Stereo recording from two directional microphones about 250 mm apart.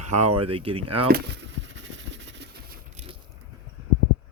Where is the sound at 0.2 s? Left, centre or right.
Right.